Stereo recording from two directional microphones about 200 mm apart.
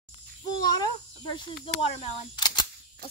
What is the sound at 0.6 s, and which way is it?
Cricket, 20° left (ahead or behind).